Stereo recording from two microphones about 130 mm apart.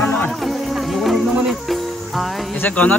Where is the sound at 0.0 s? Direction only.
15° left (ahead or behind).